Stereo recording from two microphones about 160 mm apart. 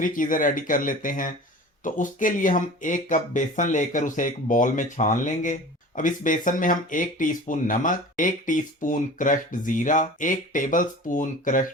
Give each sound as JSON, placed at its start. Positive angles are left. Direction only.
{"t": 0.0, "sound": "speech", "side_deg": 55}